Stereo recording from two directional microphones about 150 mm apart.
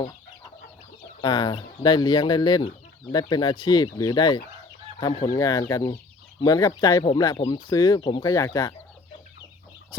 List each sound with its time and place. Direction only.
1.2 s speech: 30° left (ahead or behind)
7.0 s speech: 35° left (ahead or behind)
7.3 s speech: 25° left (ahead or behind)